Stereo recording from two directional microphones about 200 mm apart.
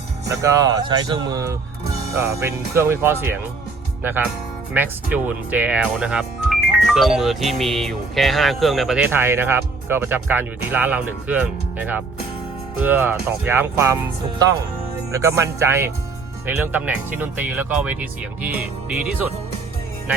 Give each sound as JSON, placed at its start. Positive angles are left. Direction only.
{"t": 0.3, "sound": "speech", "side_deg": -15}
{"t": 4.7, "sound": "speech", "side_deg": -10}